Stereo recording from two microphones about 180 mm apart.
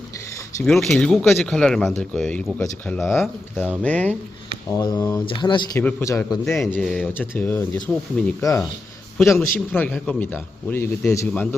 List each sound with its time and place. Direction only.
0.6 s a man's voice: centre (ahead or behind)
4.8 s a man's voice: 20° left (ahead or behind)
6.4 s a man's voice: centre (ahead or behind)